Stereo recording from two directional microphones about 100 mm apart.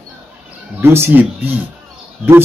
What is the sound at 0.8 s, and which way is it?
Speech, 25° right (ahead or behind).